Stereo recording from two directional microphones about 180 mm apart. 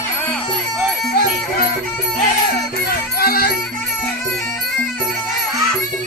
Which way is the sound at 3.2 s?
55° left (ahead or behind).